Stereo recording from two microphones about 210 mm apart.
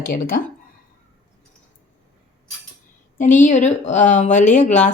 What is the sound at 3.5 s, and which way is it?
Speech, 35° left (ahead or behind).